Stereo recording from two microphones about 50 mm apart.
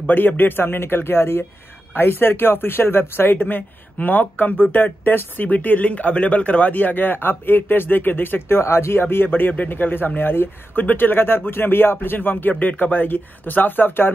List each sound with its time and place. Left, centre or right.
0.0 s speech: left